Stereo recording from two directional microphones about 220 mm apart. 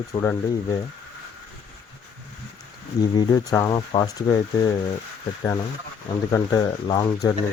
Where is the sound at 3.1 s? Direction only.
15° left (ahead or behind).